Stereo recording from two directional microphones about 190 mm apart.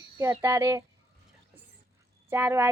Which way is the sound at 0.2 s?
15° right (ahead or behind).